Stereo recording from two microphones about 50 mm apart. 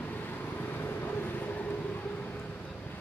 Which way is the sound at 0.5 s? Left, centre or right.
Left.